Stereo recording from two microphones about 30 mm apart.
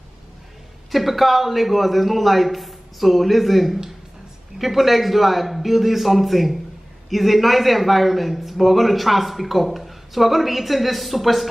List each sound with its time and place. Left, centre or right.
0.9 s a man's voice: centre